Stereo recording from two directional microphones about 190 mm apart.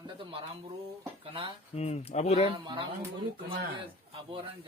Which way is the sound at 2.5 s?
25° right (ahead or behind).